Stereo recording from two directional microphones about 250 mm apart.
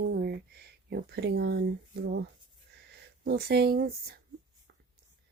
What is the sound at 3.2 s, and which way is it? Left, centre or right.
Speech, right.